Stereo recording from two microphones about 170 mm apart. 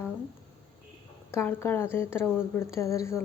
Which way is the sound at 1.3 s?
15° left (ahead or behind).